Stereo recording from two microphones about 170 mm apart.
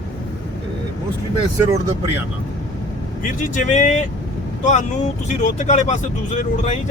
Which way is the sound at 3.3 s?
45° left (ahead or behind).